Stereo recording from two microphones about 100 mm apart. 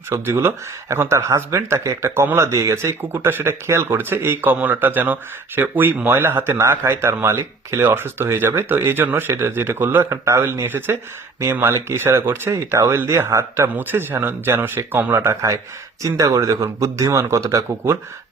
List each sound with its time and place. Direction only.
0.1 s speech: 25° right (ahead or behind)